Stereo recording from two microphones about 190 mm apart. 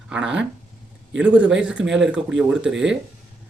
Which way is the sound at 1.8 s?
75° right (ahead or behind).